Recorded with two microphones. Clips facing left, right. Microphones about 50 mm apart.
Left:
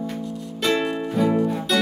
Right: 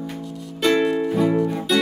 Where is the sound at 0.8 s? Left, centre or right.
Centre.